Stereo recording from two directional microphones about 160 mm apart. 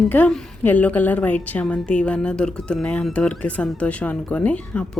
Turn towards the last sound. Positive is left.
turn(degrees=10)  # may be behind; listen again after turning